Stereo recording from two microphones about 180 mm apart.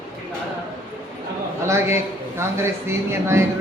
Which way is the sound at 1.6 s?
15° right (ahead or behind).